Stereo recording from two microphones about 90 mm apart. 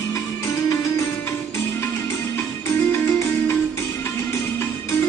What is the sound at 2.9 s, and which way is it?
Music, 25° left (ahead or behind).